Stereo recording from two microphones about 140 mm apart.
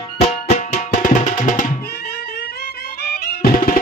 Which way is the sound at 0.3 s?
55° left (ahead or behind).